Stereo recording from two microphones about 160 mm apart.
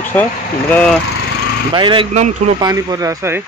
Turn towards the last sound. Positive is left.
turn(degrees=-20)  # may be behind; listen again after turning